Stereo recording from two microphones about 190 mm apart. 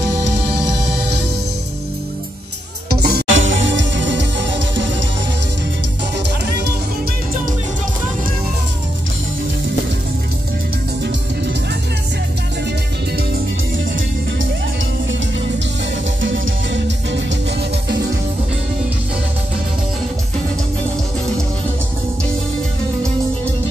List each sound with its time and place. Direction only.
2.9 s music: 55° right (ahead or behind); by 4.8 s 70° right (ahead or behind)
16.7 s music: 70° right (ahead or behind)